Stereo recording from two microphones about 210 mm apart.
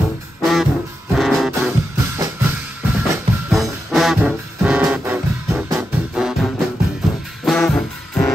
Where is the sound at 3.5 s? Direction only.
Centre (ahead or behind).